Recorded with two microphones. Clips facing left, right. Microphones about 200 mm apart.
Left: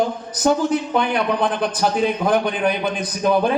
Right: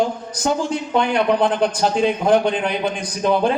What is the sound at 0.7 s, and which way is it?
A man's voice, 25° right (ahead or behind).